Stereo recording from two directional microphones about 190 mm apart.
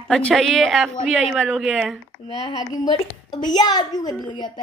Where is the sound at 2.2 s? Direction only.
25° left (ahead or behind).